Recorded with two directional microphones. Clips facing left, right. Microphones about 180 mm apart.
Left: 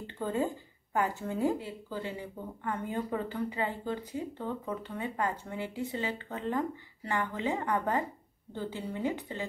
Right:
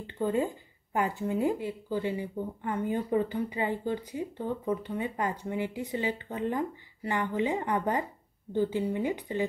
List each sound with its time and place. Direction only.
0.9 s speech: 15° right (ahead or behind)